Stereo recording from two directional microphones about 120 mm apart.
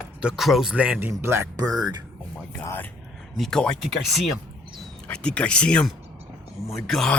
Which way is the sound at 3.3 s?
5° left (ahead or behind).